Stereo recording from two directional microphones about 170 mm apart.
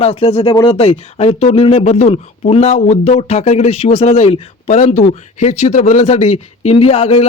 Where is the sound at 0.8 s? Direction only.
40° left (ahead or behind).